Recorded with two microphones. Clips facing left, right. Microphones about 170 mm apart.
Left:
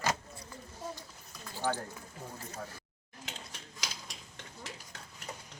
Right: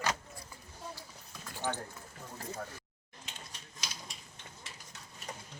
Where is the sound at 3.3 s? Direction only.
90° left.